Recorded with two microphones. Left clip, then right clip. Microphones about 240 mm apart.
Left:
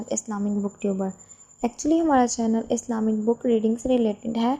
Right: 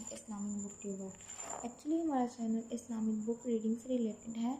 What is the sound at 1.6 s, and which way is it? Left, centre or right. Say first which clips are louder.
A woman's voice: left 16 dB; left.